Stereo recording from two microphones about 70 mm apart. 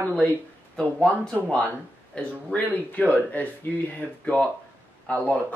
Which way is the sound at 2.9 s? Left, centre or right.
Left.